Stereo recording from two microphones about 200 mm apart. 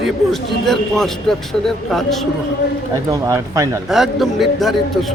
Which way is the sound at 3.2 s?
15° right (ahead or behind).